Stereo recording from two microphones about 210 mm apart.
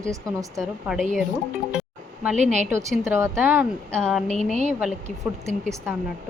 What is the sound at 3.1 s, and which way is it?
A woman's voice, 10° right (ahead or behind).